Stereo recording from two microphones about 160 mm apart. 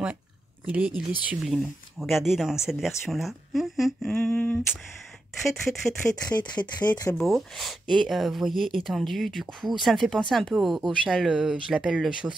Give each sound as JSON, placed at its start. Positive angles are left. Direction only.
{"t": 0.7, "sound": "speech", "side_deg": -5}
{"t": 6.2, "sound": "speech", "side_deg": 25}
{"t": 7.2, "sound": "speech", "side_deg": 0}